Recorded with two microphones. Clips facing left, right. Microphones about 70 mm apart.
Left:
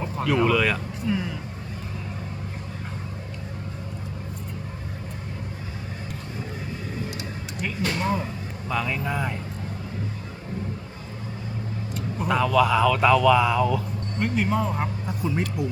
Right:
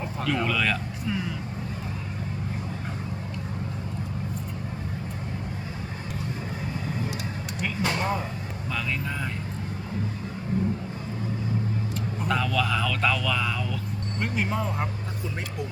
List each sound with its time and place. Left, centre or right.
0.0 s speech: centre
7.8 s a sound: centre
8.7 s speech: centre
11.9 s speech: centre
14.2 s speech: centre